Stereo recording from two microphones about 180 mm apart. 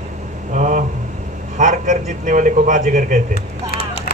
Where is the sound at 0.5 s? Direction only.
45° right (ahead or behind).